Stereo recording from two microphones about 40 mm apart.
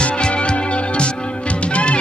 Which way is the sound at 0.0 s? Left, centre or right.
Left.